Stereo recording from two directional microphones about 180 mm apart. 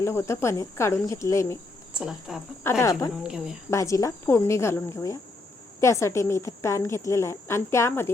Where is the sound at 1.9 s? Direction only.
Centre (ahead or behind).